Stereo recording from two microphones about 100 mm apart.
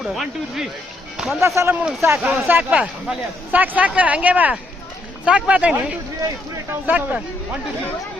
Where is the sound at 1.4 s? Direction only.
30° right (ahead or behind).